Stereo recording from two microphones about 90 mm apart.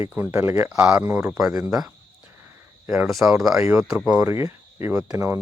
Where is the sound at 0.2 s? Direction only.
25° right (ahead or behind).